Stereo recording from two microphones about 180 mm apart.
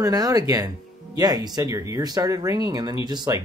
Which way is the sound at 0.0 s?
20° right (ahead or behind).